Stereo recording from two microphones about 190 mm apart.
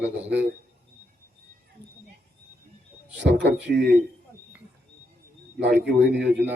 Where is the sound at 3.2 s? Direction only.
65° right (ahead or behind).